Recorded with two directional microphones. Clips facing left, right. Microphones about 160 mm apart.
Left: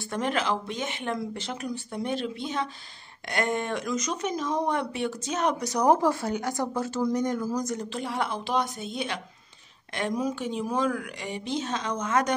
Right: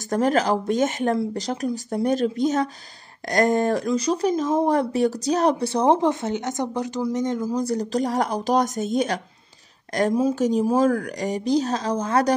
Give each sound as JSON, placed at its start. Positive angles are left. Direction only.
{"t": 0.1, "sound": "speech", "side_deg": -40}